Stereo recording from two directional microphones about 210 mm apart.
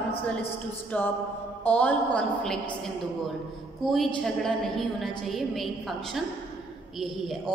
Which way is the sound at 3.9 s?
Centre (ahead or behind).